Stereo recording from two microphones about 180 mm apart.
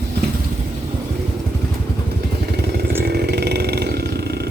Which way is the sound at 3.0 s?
60° right (ahead or behind).